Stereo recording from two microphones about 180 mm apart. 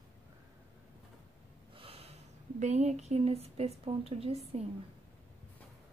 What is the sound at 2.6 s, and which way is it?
A woman's voice, 40° right (ahead or behind).